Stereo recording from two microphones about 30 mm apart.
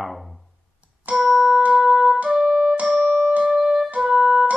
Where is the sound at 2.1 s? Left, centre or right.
Right.